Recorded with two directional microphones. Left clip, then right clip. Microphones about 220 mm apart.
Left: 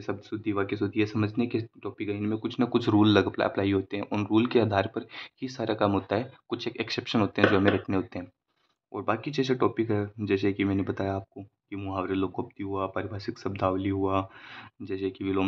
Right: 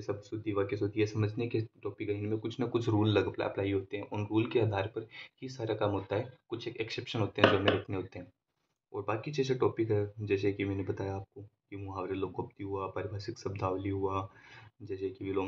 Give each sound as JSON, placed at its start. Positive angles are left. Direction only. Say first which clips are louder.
{"t": 0.0, "sound": "speech", "louder": "left 4 dB", "side_deg": 40}